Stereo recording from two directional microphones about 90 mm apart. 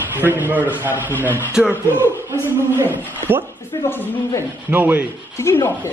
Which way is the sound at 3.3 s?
25° right (ahead or behind).